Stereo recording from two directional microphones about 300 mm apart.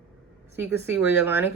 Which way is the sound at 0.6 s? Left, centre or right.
Centre.